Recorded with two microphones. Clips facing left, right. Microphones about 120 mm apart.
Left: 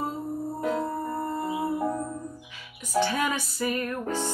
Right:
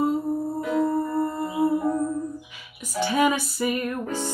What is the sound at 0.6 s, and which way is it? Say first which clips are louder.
Music: right 2 dB; 40° left (ahead or behind).